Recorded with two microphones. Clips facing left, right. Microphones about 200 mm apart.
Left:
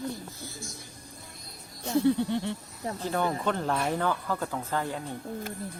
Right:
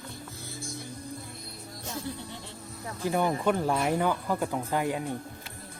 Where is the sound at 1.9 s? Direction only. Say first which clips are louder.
Left 15 dB; 65° left (ahead or behind).